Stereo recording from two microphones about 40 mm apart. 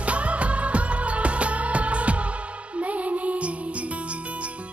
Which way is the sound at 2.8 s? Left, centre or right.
Right.